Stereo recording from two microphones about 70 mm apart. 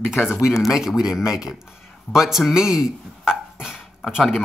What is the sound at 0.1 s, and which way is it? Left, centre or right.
Speech, left.